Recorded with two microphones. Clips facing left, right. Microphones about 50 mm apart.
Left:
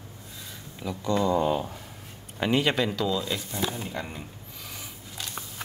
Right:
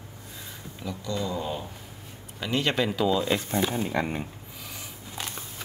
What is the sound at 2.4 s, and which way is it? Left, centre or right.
Speech, left.